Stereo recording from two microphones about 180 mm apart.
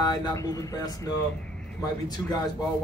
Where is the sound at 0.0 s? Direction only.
25° left (ahead or behind).